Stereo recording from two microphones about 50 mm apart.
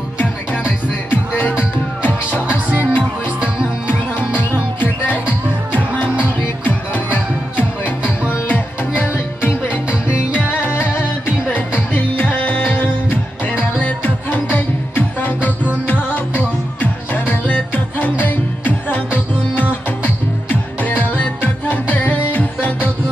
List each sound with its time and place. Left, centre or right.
0.7 s music: left
2.7 s music: right
4.4 s music: left
6.2 s music: left
9.8 s music: right
10.7 s music: left